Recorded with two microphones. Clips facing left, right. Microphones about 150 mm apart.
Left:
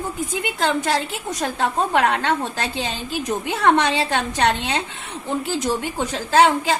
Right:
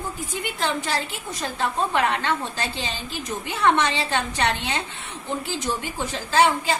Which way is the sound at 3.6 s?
40° left (ahead or behind).